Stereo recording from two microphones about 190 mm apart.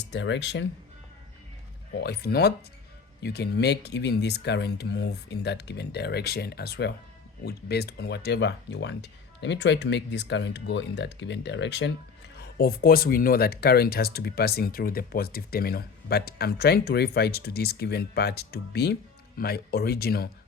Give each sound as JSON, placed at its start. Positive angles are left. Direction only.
{"t": 0.0, "sound": "speech", "side_deg": 65}
{"t": 2.0, "sound": "speech", "side_deg": 55}
{"t": 12.4, "sound": "speech", "side_deg": 55}